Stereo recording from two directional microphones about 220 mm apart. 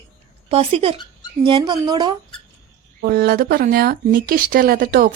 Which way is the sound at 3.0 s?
45° right (ahead or behind).